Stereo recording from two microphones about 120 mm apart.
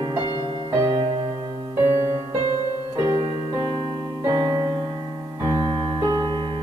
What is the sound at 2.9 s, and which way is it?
Keyboard, 45° right (ahead or behind).